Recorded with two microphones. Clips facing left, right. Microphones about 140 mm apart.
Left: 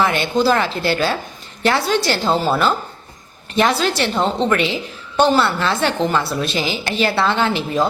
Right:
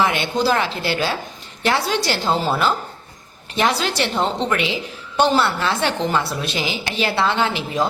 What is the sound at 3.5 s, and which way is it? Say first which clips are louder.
A woman's voice: left 3 dB; 15° right (ahead or behind).